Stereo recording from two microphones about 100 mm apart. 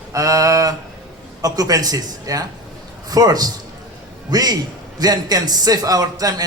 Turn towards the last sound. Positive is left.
turn(degrees=-40)  # may be behind; listen again after turning